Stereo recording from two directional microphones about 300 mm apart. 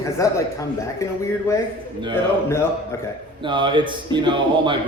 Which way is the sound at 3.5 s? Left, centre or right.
Centre.